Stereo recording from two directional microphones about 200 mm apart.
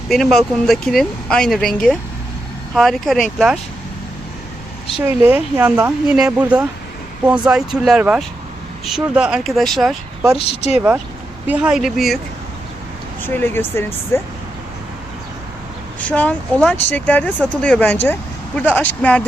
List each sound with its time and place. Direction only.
0.1 s speech: centre (ahead or behind)
4.9 s speech: 10° right (ahead or behind)
10.3 s speech: 30° left (ahead or behind)
10.8 s speech: 5° right (ahead or behind)
13.2 s speech: 10° left (ahead or behind)
16.0 s speech: 5° left (ahead or behind)